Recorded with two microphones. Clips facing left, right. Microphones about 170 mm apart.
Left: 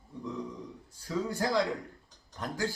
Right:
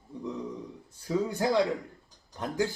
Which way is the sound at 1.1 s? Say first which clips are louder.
Right 3 dB; 20° right (ahead or behind).